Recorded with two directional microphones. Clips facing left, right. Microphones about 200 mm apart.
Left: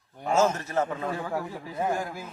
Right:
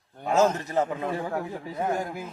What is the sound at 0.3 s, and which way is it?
Speech, 15° right (ahead or behind).